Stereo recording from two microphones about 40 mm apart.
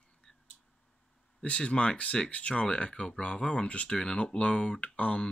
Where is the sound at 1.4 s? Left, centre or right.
Left.